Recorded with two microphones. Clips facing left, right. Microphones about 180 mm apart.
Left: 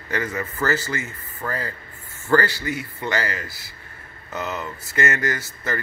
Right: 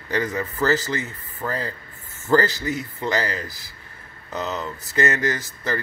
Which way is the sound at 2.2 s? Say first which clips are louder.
Right 1 dB; 20° right (ahead or behind).